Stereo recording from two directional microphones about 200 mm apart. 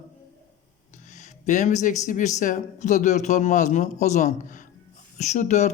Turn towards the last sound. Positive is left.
turn(degrees=35)  # may be behind; listen again after turning